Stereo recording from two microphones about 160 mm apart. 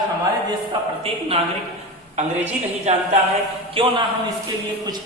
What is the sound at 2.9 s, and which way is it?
A man's voice, 45° right (ahead or behind).